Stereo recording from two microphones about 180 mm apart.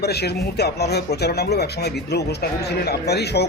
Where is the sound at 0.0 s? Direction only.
65° left (ahead or behind).